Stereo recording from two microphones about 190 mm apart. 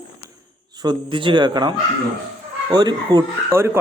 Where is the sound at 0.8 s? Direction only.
25° right (ahead or behind).